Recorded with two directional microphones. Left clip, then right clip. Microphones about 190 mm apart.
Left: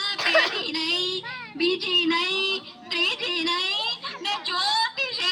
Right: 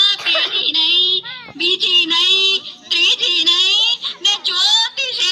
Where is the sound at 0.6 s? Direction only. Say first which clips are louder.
Right 12 dB; 40° left (ahead or behind).